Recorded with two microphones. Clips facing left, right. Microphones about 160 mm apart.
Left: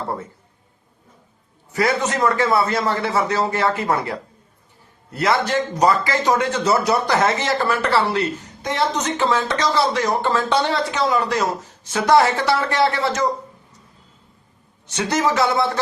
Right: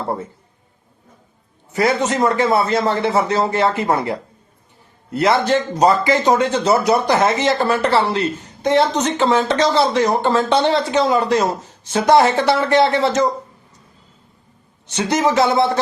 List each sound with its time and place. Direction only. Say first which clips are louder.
1.7 s speech: right 3 dB; 25° right (ahead or behind)
14.9 s speech: right 3 dB; 20° right (ahead or behind)